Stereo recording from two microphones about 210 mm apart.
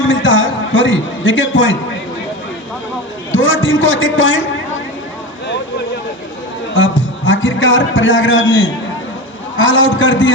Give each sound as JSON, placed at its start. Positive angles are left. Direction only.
{"t": 0.1, "sound": "a sound", "side_deg": 65}
{"t": 3.3, "sound": "a man's voice", "side_deg": 65}
{"t": 6.7, "sound": "a man's voice", "side_deg": 65}